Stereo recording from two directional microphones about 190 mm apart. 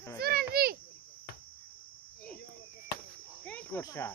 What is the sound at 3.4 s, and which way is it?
Cricket, 10° left (ahead or behind).